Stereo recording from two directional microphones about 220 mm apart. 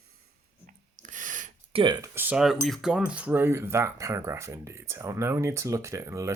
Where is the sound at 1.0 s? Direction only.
35° right (ahead or behind); by 2.5 s 5° right (ahead or behind).